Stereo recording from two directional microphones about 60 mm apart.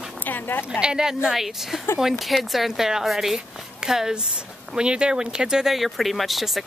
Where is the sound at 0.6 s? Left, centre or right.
Centre.